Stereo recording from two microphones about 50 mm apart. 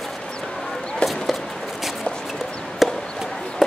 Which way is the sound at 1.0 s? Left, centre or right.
Left.